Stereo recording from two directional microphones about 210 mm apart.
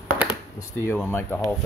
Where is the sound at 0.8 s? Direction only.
10° left (ahead or behind).